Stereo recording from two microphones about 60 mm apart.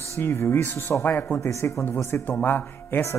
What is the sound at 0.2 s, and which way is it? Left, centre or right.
Speech, left.